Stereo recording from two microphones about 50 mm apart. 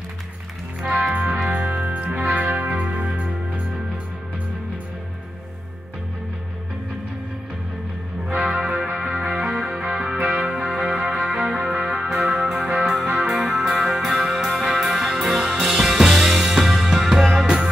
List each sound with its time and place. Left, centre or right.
1.1 s music: right
8.4 s music: centre
12.8 s music: centre